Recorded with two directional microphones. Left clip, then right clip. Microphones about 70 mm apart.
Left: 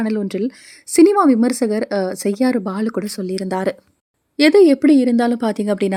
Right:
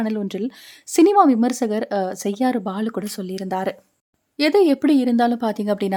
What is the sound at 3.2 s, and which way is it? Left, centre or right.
Speech, left.